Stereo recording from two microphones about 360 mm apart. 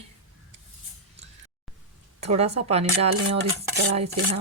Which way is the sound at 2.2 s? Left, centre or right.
Centre.